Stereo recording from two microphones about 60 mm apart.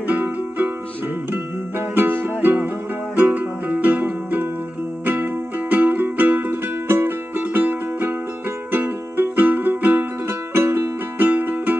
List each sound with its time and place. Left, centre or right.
0.0 s music: right
2.0 s music: right
10.5 s music: right